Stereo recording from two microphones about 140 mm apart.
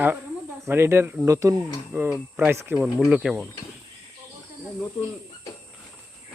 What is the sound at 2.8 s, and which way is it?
Speech, 5° right (ahead or behind).